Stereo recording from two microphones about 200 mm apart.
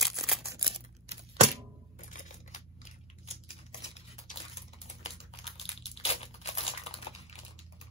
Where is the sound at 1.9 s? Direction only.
40° left (ahead or behind).